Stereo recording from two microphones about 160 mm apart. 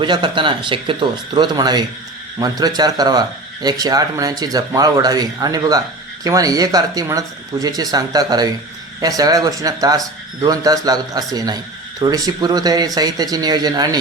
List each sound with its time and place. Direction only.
0.0 s speech: 30° right (ahead or behind)